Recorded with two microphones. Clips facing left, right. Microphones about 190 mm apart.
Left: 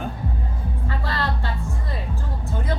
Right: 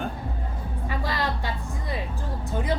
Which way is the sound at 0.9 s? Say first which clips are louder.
Even; 15° right (ahead or behind).